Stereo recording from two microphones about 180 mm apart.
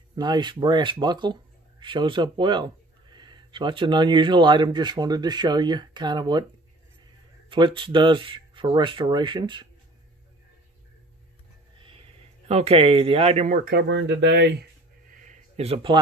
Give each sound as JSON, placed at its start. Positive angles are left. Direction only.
{"t": 0.1, "sound": "speech", "side_deg": -25}
{"t": 7.4, "sound": "speech", "side_deg": -25}
{"t": 12.4, "sound": "speech", "side_deg": -35}
{"t": 13.7, "sound": "speech", "side_deg": -70}
{"t": 15.0, "sound": "a sound", "side_deg": -40}